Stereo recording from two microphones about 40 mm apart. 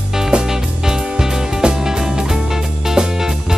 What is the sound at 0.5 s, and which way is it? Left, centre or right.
Music, centre.